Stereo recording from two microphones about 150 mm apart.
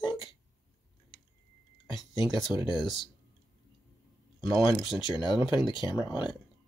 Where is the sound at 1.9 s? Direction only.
30° left (ahead or behind).